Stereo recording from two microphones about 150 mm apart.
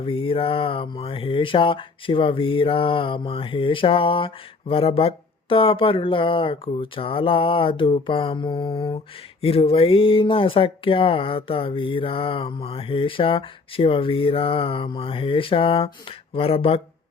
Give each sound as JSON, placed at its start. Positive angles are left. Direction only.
{"t": 0.0, "sound": "speech", "side_deg": 35}